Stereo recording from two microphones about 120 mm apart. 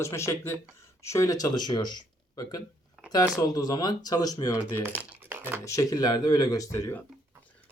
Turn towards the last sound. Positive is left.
turn(degrees=25)  # may be behind; listen again after turning